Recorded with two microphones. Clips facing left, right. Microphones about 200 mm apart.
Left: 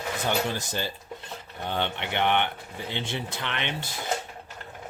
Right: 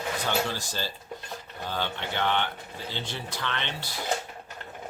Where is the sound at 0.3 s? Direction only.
20° left (ahead or behind).